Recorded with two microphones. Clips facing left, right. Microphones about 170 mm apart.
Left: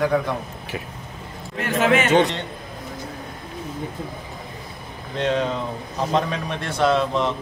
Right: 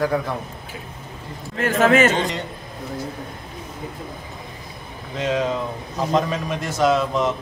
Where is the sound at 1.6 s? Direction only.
45° right (ahead or behind).